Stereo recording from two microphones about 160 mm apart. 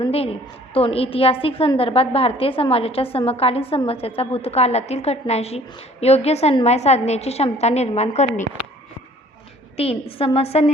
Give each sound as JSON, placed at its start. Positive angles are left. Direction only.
{"t": 0.1, "sound": "a woman's voice", "side_deg": 40}
{"t": 9.7, "sound": "a woman's voice", "side_deg": 40}